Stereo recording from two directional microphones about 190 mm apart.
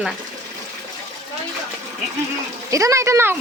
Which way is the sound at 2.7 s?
15° right (ahead or behind).